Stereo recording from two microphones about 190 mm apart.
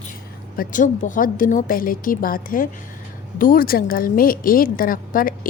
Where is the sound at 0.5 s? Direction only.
45° left (ahead or behind).